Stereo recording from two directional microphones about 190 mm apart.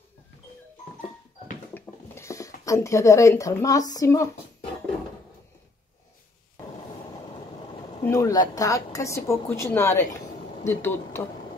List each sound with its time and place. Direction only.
1.7 s speech: 15° left (ahead or behind)
8.0 s a woman's voice: 15° left (ahead or behind)